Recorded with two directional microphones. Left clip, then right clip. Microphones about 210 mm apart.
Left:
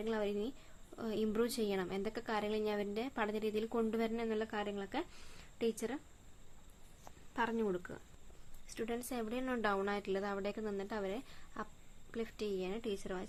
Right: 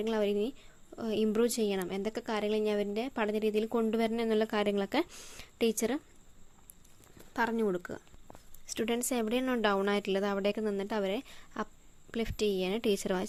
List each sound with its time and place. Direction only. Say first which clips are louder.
0.0 s a woman's voice: right 7 dB; 30° right (ahead or behind)
7.3 s speech: right 6 dB; 30° right (ahead or behind)